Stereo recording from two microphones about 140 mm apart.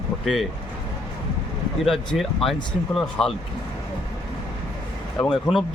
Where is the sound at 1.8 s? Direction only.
Centre (ahead or behind).